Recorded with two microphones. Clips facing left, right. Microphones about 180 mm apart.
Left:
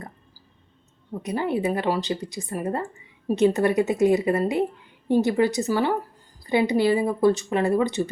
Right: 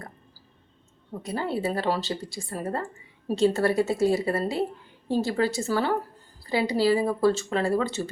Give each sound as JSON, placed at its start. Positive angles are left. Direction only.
{"t": 1.2, "sound": "speech", "side_deg": 20}